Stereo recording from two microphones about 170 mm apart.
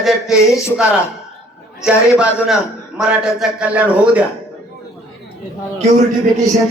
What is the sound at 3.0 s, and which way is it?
A man's voice, 5° right (ahead or behind).